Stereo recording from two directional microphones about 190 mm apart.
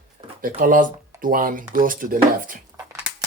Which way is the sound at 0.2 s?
30° right (ahead or behind).